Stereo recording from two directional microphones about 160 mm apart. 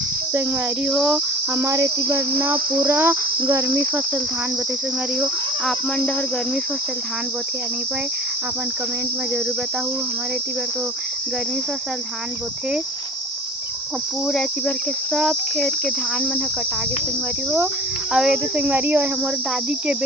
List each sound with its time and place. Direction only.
0.9 s cricket: centre (ahead or behind)
1.6 s cricket: 20° right (ahead or behind)
5.1 s cricket: 5° right (ahead or behind)
14.3 s cricket: 5° left (ahead or behind)
18.1 s cricket: 5° right (ahead or behind)